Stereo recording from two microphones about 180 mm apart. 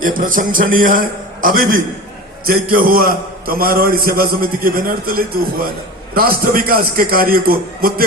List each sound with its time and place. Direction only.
0.0 s a man's voice: 50° right (ahead or behind)